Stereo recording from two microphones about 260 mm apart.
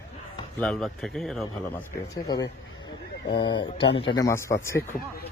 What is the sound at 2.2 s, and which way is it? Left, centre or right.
Speech, centre.